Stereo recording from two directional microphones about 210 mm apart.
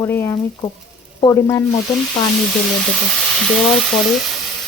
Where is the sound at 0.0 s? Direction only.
10° left (ahead or behind).